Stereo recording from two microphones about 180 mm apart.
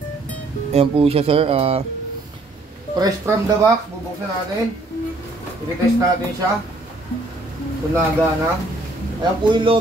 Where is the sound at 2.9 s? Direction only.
20° right (ahead or behind).